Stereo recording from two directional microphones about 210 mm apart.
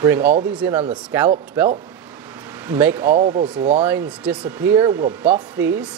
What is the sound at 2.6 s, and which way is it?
Speech, 10° right (ahead or behind).